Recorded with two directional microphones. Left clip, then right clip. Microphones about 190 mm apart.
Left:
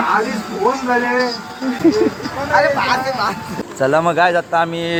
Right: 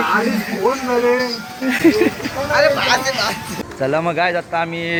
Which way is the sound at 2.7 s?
60° left (ahead or behind).